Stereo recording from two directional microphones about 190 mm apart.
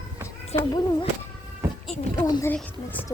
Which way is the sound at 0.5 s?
20° left (ahead or behind).